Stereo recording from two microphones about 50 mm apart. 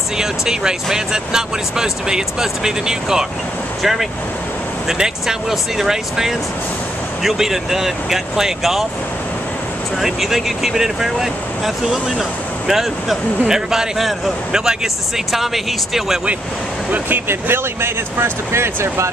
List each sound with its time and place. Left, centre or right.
0.2 s speech: centre
9.9 s speech: centre
17.3 s speech: right